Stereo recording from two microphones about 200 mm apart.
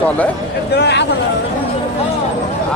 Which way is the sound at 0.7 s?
55° left (ahead or behind).